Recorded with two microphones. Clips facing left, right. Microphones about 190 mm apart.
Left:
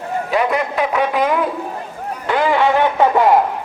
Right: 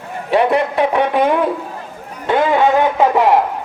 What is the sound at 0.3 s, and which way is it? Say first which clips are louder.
Speech: right 5 dB; 30° right (ahead or behind).